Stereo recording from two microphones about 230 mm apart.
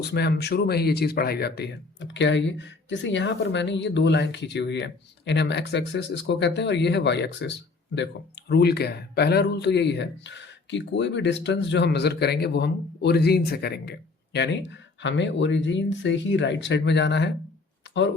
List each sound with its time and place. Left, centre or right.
0.0 s speech: left